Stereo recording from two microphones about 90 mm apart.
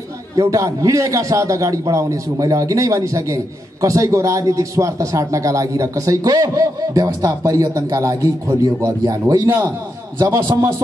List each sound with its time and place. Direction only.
0.4 s a man's voice: 35° right (ahead or behind)